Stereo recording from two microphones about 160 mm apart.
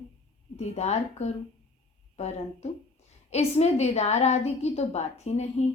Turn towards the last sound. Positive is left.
turn(degrees=45)  # may be behind; listen again after turning